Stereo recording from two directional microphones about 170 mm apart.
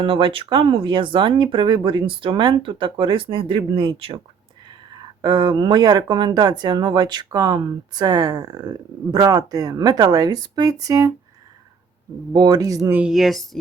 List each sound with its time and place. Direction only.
0.0 s speech: 30° right (ahead or behind)
5.2 s speech: 25° right (ahead or behind)
12.3 s speech: 20° right (ahead or behind)
13.0 s speech: centre (ahead or behind)